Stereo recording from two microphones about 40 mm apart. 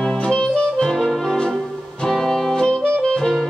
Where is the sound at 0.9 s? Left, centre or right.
Centre.